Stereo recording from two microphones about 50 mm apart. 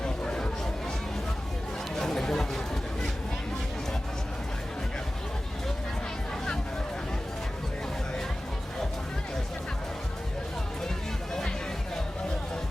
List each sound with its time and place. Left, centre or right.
0.0 s chatter: centre
2.0 s chatter: centre